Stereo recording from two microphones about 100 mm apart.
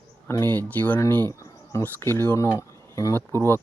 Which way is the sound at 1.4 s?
30° left (ahead or behind).